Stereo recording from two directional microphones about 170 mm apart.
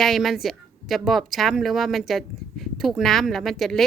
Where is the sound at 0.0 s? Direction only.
Centre (ahead or behind).